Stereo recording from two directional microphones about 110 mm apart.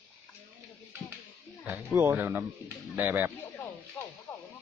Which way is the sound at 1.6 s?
20° right (ahead or behind).